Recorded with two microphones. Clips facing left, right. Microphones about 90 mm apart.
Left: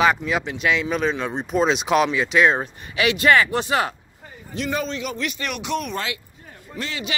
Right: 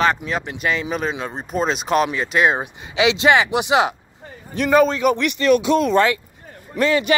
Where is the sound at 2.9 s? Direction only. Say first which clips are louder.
Right 2 dB; 25° right (ahead or behind).